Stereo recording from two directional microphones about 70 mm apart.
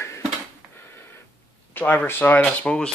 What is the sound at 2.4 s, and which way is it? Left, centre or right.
Speech, centre.